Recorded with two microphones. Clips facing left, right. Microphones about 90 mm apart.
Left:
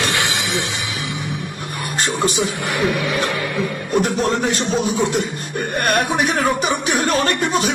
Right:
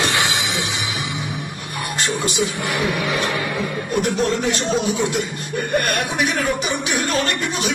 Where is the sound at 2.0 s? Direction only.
40° left (ahead or behind).